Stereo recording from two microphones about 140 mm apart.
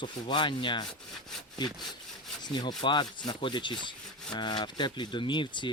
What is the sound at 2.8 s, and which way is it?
Speech, 30° left (ahead or behind).